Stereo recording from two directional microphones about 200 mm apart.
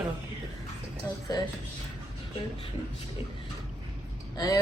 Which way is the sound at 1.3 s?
20° left (ahead or behind).